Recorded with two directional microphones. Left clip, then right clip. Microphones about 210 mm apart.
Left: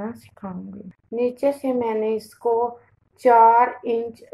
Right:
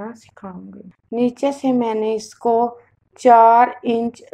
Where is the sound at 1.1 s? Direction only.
45° right (ahead or behind).